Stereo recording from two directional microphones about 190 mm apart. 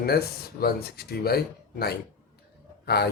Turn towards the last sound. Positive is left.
turn(degrees=55)  # may be behind; listen again after turning